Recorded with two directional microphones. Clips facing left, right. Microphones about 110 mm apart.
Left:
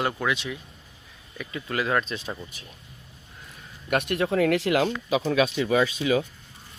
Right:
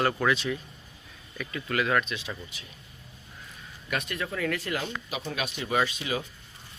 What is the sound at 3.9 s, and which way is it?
Speech, 60° left (ahead or behind).